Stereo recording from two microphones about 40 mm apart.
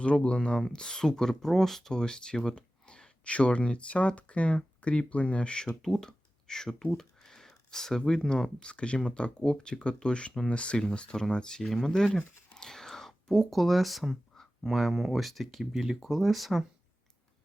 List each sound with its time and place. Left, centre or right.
0.0 s speech: left; by 1.9 s centre
1.9 s speech: centre
2.6 s speech: left
12.5 s whispering: centre
13.5 s speech: centre
15.7 s speech: centre
16.0 s speech: centre